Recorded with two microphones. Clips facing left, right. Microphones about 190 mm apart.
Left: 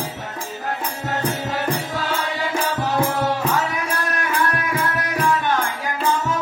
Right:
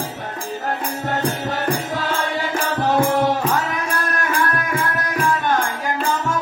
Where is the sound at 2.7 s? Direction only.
50° right (ahead or behind).